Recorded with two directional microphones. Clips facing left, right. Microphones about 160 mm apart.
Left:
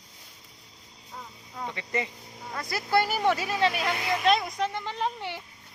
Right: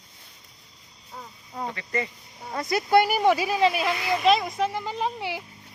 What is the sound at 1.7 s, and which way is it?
Speech, 20° left (ahead or behind).